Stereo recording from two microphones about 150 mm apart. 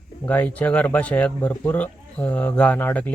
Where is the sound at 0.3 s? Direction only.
10° left (ahead or behind).